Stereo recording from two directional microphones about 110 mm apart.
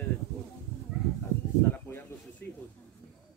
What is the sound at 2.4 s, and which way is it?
Speech, 20° left (ahead or behind).